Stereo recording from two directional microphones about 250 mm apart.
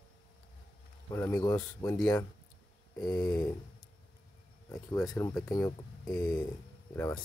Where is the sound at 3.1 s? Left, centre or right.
Centre.